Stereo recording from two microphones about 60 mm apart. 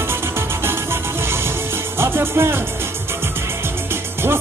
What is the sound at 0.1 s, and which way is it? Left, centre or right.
Music, right.